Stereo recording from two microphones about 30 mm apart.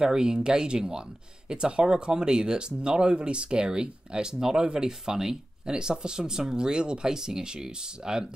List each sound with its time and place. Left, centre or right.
0.0 s speech: right